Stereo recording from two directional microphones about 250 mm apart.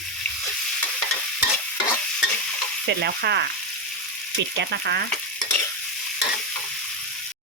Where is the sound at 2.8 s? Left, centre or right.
Right.